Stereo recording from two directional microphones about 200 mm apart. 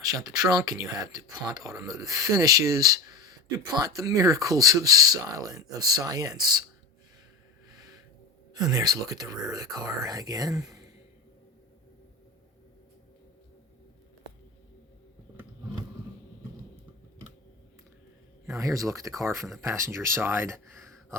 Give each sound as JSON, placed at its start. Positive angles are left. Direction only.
{"t": 0.1, "sound": "speech", "side_deg": -20}
{"t": 8.5, "sound": "speech", "side_deg": -20}
{"t": 18.5, "sound": "speech", "side_deg": -15}